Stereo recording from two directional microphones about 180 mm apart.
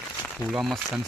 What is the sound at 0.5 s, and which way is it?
Speech, centre (ahead or behind).